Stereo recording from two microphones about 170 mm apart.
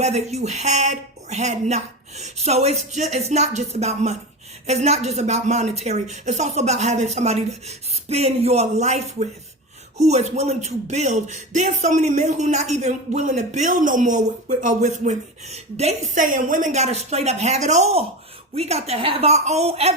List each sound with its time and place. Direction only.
0.0 s a woman's voice: 40° right (ahead or behind)